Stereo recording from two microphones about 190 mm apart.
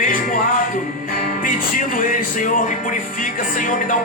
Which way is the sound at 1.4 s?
45° left (ahead or behind).